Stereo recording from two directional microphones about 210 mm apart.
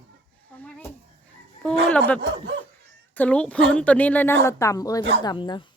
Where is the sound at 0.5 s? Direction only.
5° left (ahead or behind).